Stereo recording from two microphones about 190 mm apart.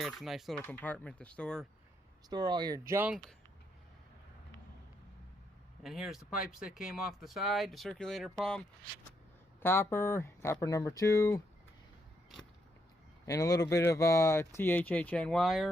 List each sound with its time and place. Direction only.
0.0 s speech: centre (ahead or behind)
2.3 s speech: 20° right (ahead or behind)
5.8 s speech: centre (ahead or behind); by 11.4 s 15° left (ahead or behind)
13.2 s speech: 20° left (ahead or behind); by 15.7 s centre (ahead or behind)